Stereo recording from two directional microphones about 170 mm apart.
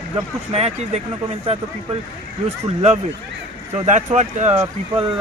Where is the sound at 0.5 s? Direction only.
40° right (ahead or behind).